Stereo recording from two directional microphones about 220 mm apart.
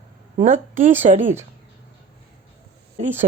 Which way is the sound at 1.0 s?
35° right (ahead or behind).